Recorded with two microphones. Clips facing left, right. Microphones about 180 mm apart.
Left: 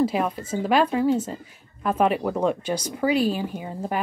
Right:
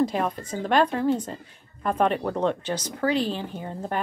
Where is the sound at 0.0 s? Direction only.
5° left (ahead or behind).